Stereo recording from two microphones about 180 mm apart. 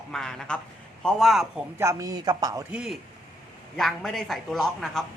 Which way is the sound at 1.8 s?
15° right (ahead or behind).